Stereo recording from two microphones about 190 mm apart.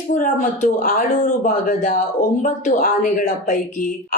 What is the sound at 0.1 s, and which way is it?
A woman's voice, 45° left (ahead or behind).